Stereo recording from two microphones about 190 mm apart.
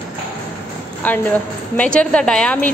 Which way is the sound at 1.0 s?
5° left (ahead or behind).